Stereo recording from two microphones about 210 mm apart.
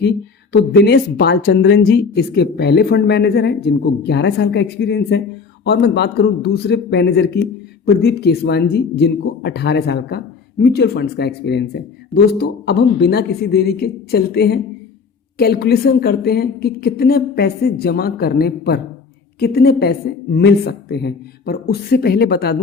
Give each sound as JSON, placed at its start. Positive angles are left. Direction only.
{"t": 0.5, "sound": "speech", "side_deg": 50}